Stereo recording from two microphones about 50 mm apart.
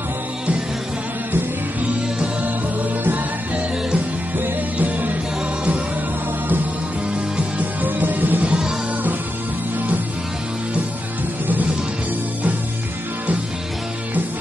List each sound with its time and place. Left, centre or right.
1.9 s music: right
4.4 s music: right
7.3 s music: right
8.5 s music: centre